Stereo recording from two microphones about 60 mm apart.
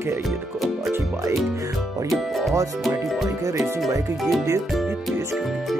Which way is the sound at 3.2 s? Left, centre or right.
Right.